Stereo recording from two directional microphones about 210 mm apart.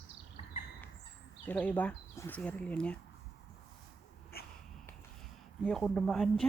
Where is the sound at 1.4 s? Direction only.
5° left (ahead or behind).